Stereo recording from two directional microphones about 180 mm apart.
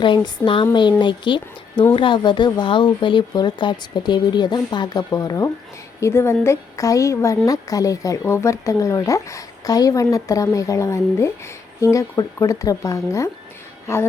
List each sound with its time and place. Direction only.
0.0 s a woman's voice: 25° left (ahead or behind)